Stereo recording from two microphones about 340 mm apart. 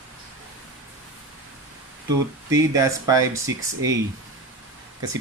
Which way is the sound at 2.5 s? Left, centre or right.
Centre.